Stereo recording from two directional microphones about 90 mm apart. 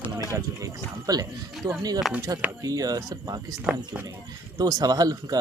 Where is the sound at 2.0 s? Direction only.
Centre (ahead or behind).